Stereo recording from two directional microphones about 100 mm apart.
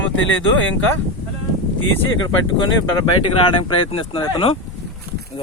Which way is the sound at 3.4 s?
60° left (ahead or behind).